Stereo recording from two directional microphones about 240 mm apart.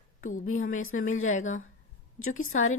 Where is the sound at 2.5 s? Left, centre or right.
Left.